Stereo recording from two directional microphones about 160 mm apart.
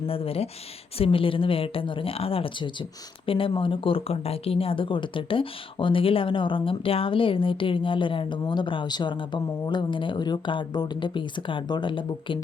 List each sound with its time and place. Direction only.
0.1 s speech: 35° left (ahead or behind)